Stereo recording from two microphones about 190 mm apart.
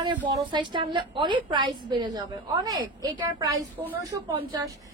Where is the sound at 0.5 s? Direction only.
25° right (ahead or behind).